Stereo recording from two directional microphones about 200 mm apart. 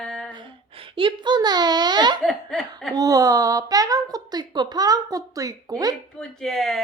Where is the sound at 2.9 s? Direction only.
15° right (ahead or behind).